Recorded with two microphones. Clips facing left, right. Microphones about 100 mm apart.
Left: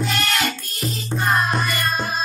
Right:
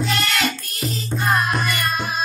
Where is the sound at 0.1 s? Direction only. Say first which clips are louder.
Even; 35° left (ahead or behind).